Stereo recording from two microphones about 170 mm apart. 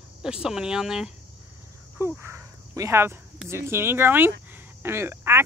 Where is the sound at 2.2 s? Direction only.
15° right (ahead or behind).